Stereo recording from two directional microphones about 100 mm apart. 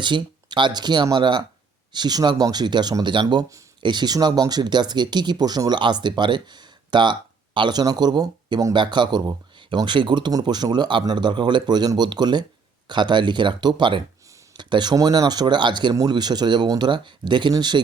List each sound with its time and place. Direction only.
0.0 s speech: 50° right (ahead or behind)